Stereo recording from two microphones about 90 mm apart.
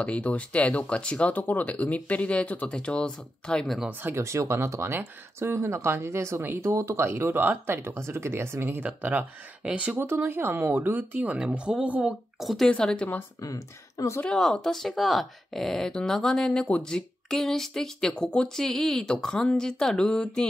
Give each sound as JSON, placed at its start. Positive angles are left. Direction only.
{"t": 0.0, "sound": "speech", "side_deg": 15}
{"t": 4.0, "sound": "speech", "side_deg": -30}
{"t": 8.8, "sound": "speech", "side_deg": -15}
{"t": 10.0, "sound": "speech", "side_deg": -25}
{"t": 12.4, "sound": "speech", "side_deg": 0}
{"t": 13.4, "sound": "speech", "side_deg": 40}
{"t": 14.2, "sound": "speech", "side_deg": 10}